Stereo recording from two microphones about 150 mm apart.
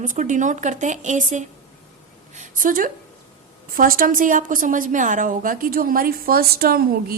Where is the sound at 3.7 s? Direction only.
70° right (ahead or behind).